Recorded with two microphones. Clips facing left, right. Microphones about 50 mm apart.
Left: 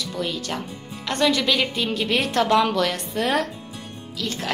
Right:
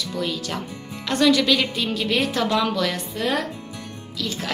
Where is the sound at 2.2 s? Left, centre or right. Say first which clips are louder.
Left 6 dB; left.